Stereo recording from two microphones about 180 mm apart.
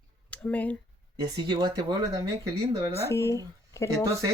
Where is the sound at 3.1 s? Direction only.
15° left (ahead or behind).